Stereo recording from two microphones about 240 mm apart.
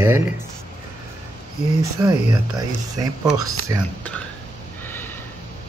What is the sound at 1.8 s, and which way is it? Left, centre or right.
Speech, centre.